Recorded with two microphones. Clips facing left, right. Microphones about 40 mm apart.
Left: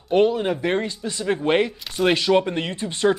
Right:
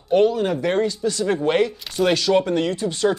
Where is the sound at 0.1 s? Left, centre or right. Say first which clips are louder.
Right 1 dB; centre.